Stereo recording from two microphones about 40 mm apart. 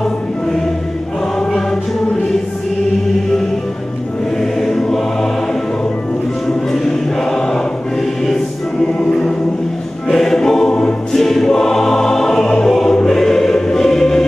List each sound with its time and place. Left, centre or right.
4.4 s music: centre
6.4 s choir: centre
10.0 s choir: centre
10.7 s choir: left
11.1 s choir: centre